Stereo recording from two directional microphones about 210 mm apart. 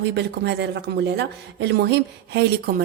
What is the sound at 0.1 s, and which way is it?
Speech, 55° right (ahead or behind).